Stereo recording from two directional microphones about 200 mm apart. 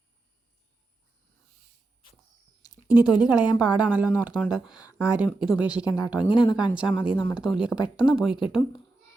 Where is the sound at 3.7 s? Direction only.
5° right (ahead or behind).